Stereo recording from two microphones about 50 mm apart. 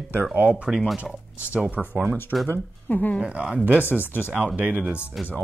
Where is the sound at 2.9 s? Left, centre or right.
Left.